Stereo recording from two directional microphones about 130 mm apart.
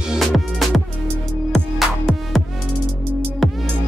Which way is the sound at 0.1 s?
Centre (ahead or behind).